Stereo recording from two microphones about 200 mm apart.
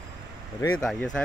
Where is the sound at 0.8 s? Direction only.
Centre (ahead or behind).